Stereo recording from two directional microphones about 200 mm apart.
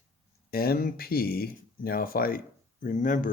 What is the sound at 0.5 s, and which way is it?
Speech, 50° left (ahead or behind).